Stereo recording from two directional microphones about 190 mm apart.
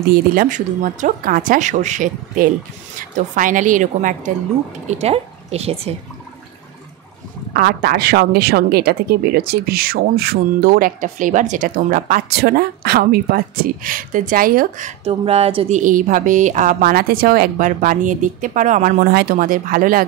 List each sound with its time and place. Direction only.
0.3 s a woman's voice: 45° right (ahead or behind)
7.5 s a woman's voice: 50° right (ahead or behind)